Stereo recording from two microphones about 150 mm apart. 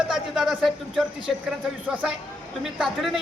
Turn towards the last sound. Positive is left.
turn(degrees=0)  # may be behind; listen again after turning